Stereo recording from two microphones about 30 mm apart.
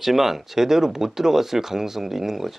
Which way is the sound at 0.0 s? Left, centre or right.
Centre.